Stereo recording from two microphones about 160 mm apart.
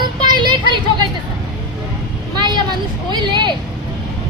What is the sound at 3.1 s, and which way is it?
Speech, 30° right (ahead or behind).